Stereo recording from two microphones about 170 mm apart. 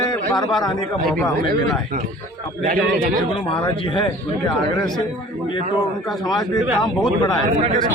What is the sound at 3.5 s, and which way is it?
Speech, 30° left (ahead or behind).